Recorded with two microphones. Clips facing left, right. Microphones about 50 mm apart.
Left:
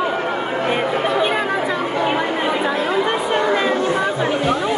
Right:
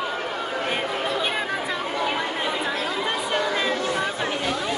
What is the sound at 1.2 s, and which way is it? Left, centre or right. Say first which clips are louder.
Chatter: left 7 dB; left.